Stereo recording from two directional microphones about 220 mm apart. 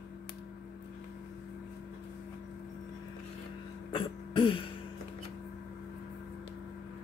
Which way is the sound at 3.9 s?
25° left (ahead or behind).